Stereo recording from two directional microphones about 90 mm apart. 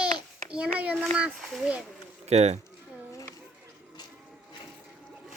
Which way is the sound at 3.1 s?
35° left (ahead or behind).